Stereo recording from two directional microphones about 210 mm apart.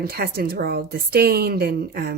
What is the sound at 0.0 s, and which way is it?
A woman's voice, 45° right (ahead or behind).